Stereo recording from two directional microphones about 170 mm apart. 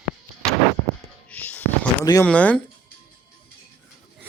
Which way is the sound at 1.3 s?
10° left (ahead or behind).